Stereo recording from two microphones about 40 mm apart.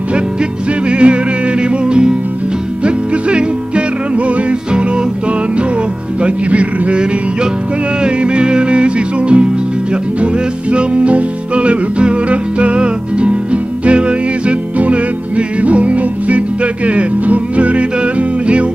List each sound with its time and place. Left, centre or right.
0.1 s music: right
6.2 s music: right
8.0 s music: right